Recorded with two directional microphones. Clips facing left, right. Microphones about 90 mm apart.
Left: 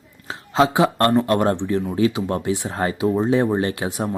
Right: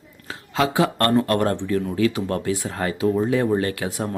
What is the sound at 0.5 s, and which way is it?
Speech, 25° left (ahead or behind).